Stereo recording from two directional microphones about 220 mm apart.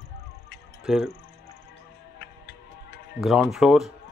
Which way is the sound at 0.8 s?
5° right (ahead or behind).